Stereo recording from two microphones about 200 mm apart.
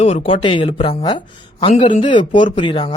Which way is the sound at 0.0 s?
25° left (ahead or behind).